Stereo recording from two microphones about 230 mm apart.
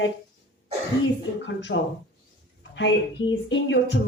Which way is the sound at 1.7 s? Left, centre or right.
Left.